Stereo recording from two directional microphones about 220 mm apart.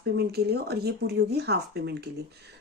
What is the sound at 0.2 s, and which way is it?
Speech, 45° right (ahead or behind).